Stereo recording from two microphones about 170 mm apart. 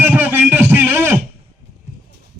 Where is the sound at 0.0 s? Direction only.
10° right (ahead or behind).